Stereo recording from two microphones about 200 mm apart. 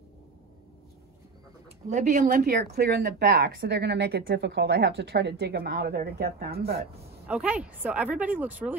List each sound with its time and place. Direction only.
1.9 s speech: 40° right (ahead or behind)
7.2 s speech: 5° right (ahead or behind)